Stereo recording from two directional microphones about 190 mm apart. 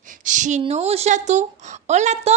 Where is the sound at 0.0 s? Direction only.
40° right (ahead or behind).